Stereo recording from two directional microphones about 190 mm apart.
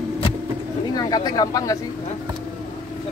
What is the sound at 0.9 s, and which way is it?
Speech, 20° left (ahead or behind).